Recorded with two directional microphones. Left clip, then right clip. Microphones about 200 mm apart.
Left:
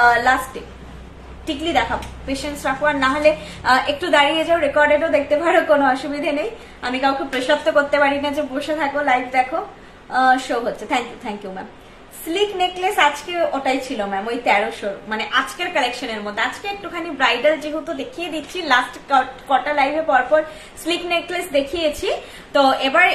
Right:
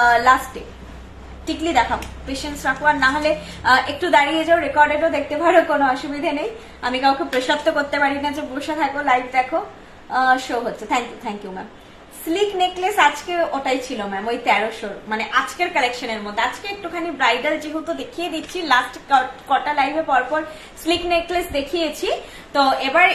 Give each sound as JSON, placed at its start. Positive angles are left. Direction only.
{"t": 0.0, "sound": "a woman's voice", "side_deg": 10}
{"t": 1.6, "sound": "a woman's voice", "side_deg": 5}